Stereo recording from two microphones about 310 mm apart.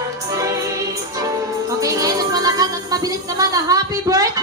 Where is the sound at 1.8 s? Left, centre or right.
Centre.